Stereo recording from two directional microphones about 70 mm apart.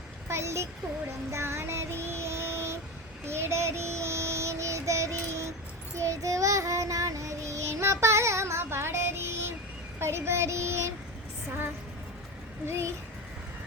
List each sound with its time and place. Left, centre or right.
0.3 s a child's voice: right
1.3 s child singing: right
12.6 s child singing: right